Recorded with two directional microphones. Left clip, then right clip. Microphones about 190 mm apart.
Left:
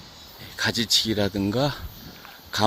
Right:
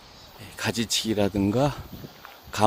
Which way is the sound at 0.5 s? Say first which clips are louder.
Left 5 dB; 15° right (ahead or behind).